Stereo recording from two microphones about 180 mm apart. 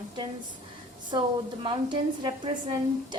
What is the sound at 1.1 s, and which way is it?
A woman's voice, 25° right (ahead or behind).